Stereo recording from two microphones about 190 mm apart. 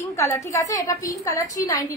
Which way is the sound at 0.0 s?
15° left (ahead or behind).